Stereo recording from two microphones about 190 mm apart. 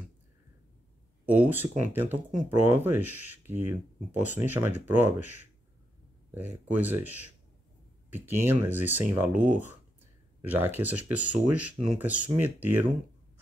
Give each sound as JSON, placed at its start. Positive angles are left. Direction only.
{"t": 1.2, "sound": "speech", "side_deg": -10}
{"t": 5.0, "sound": "speech", "side_deg": 40}
{"t": 6.3, "sound": "speech", "side_deg": -10}
{"t": 8.1, "sound": "speech", "side_deg": -10}